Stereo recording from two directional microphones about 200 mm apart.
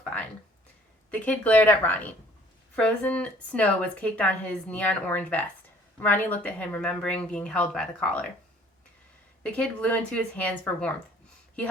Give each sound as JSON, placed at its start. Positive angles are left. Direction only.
{"t": 0.0, "sound": "a sound", "side_deg": 10}
{"t": 1.1, "sound": "speech", "side_deg": 10}
{"t": 9.4, "sound": "speech", "side_deg": 5}